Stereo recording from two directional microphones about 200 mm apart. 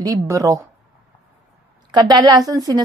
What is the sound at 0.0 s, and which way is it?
Speech, 20° right (ahead or behind).